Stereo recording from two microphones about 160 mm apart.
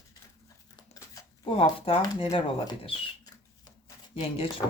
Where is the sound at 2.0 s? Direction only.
25° left (ahead or behind).